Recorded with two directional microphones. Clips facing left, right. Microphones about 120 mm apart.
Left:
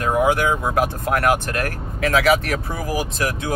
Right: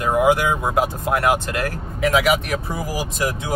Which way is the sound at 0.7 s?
20° right (ahead or behind).